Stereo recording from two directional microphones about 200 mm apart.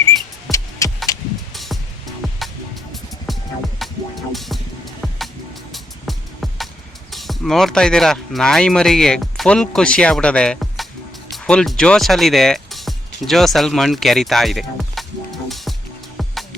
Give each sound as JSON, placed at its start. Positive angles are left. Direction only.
{"t": 0.5, "sound": "music", "side_deg": 0}
{"t": 1.1, "sound": "vehicle", "side_deg": 15}
{"t": 1.5, "sound": "music", "side_deg": 0}
{"t": 3.3, "sound": "music", "side_deg": 0}
{"t": 7.1, "sound": "speech", "side_deg": 0}
{"t": 15.4, "sound": "music", "side_deg": 0}